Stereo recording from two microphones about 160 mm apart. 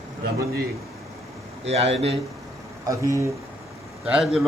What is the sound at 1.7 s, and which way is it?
Speech, 40° right (ahead or behind).